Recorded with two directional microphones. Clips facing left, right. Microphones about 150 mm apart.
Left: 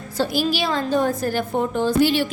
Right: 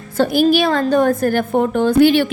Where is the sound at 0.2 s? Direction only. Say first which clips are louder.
Right 8 dB; 55° right (ahead or behind).